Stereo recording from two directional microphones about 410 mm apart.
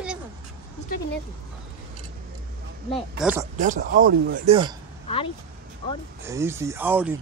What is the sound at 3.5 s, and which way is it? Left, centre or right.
Speech, centre.